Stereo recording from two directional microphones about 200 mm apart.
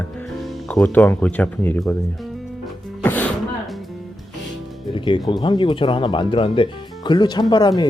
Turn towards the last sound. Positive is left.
turn(degrees=20)  # may be behind; listen again after turning